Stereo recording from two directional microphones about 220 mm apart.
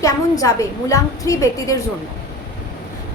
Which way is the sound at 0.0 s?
15° left (ahead or behind).